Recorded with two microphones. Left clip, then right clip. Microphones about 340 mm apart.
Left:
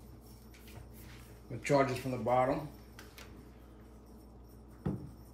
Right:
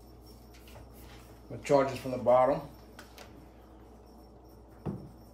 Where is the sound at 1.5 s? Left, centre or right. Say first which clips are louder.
Right 3 dB; centre.